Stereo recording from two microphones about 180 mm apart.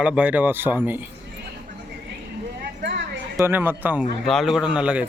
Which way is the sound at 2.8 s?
75° right (ahead or behind).